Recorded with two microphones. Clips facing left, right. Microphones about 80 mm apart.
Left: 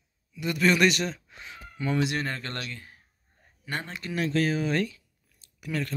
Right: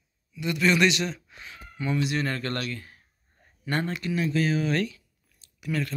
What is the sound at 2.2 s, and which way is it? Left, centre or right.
Speech, left.